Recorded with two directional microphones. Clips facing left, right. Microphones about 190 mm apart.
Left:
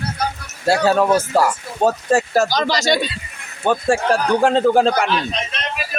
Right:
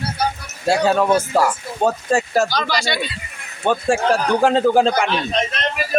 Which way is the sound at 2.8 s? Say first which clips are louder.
Left 5 dB; 45° left (ahead or behind).